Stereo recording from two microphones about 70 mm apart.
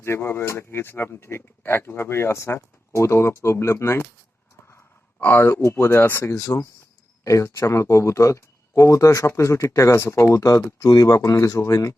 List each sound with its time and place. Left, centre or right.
0.0 s speech: left
5.2 s speech: left
6.3 s speech: left
10.8 s speech: left